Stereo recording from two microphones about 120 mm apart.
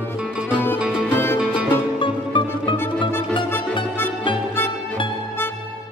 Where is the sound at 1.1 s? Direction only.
20° left (ahead or behind).